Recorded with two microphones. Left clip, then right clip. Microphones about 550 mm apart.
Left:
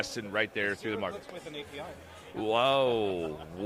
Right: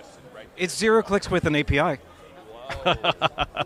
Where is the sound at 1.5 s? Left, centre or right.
Right.